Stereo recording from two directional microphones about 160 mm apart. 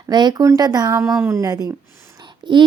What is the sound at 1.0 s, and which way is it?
A woman's voice, 15° right (ahead or behind).